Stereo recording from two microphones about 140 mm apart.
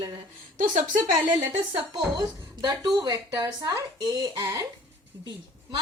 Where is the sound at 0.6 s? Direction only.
70° right (ahead or behind).